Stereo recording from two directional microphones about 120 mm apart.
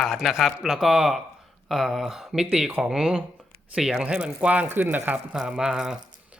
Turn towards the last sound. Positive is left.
turn(degrees=-5)  # may be behind; listen again after turning